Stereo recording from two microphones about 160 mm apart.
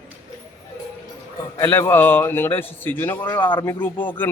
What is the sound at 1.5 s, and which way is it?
A man's voice, 15° left (ahead or behind).